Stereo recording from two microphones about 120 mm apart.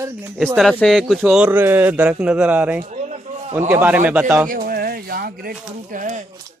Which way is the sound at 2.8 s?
70° right (ahead or behind).